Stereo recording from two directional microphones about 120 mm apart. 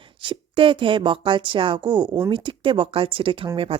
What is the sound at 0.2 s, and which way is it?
Speech, 45° right (ahead or behind).